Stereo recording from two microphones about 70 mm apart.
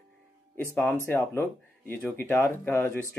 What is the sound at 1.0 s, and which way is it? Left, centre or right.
Speech, left.